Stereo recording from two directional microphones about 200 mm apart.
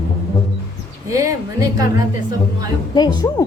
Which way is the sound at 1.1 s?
15° right (ahead or behind).